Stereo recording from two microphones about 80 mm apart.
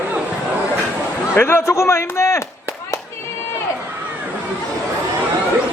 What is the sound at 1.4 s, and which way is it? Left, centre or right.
A man's voice, left.